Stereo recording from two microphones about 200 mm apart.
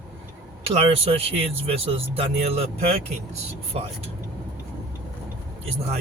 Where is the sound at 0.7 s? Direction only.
30° right (ahead or behind).